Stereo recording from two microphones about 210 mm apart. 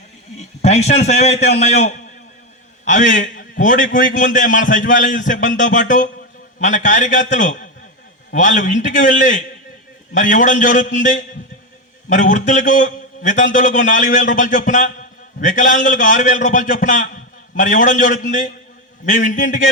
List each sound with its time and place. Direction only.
0.6 s a man's voice: 30° left (ahead or behind)